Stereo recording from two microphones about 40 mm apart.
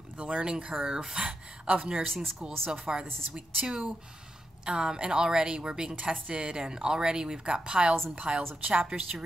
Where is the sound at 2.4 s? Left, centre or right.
Centre.